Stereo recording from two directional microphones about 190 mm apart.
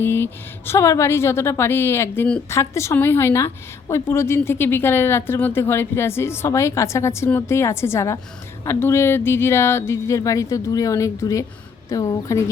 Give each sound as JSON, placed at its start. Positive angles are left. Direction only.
{"t": 0.0, "sound": "a woman's voice", "side_deg": 10}